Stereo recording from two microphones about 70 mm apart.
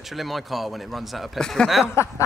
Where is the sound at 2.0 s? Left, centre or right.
Left.